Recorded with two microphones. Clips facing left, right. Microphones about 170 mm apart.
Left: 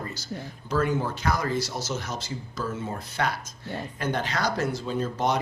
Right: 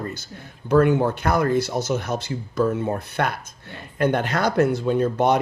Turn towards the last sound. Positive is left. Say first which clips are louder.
# right 7 dB
turn(degrees=-60)  # may be behind; listen again after turning